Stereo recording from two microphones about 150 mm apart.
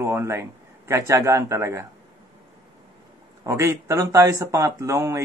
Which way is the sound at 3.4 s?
20° right (ahead or behind).